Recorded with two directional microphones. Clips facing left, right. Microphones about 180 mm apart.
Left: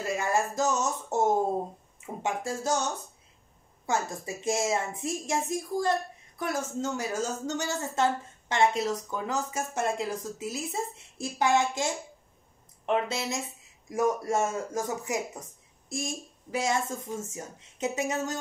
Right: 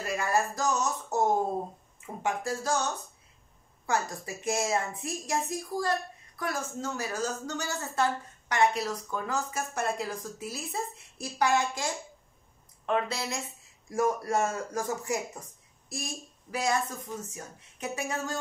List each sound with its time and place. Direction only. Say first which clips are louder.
0.0 s a sound: left 1 dB; 25° left (ahead or behind)
2.0 s a woman's voice: even; 25° left (ahead or behind)
3.8 s a woman's voice: left 1 dB; 20° left (ahead or behind)